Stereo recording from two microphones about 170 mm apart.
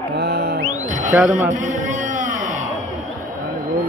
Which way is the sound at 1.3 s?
50° right (ahead or behind).